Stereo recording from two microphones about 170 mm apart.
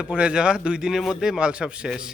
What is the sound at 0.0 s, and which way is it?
A man's voice, 5° right (ahead or behind).